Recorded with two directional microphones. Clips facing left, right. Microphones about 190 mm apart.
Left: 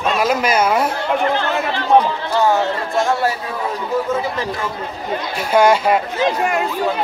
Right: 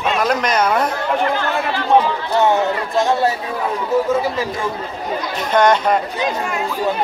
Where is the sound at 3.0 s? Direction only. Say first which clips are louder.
Right 1 dB; 20° right (ahead or behind).